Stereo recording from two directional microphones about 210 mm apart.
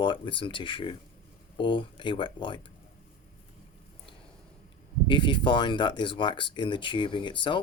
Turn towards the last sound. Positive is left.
turn(degrees=25)  # may be behind; listen again after turning